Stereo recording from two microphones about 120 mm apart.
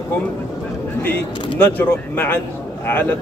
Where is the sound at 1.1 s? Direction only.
15° left (ahead or behind).